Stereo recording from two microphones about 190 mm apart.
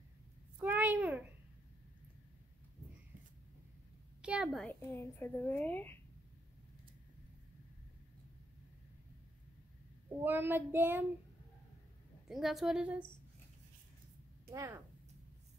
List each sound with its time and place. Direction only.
0.6 s a sound: 10° right (ahead or behind)
4.2 s a woman's voice: 5° right (ahead or behind)
4.9 s a woman's voice: 15° left (ahead or behind)
10.0 s child singing: 10° right (ahead or behind)
12.3 s a woman's voice: centre (ahead or behind)
14.5 s child singing: 15° right (ahead or behind)